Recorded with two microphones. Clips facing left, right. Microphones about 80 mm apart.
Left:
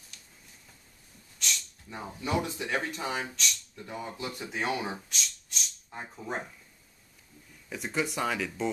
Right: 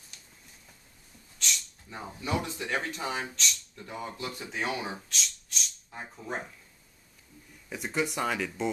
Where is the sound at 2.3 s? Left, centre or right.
Centre.